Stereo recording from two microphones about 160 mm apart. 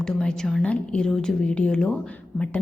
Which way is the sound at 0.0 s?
5° left (ahead or behind).